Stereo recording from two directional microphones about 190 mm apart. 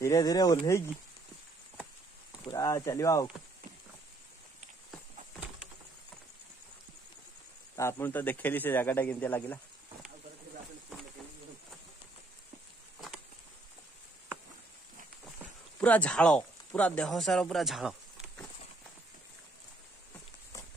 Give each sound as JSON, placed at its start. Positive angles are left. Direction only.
{"t": 0.0, "sound": "speech", "side_deg": 20}
{"t": 2.4, "sound": "speech", "side_deg": 15}
{"t": 7.7, "sound": "speech", "side_deg": 15}
{"t": 15.8, "sound": "speech", "side_deg": 5}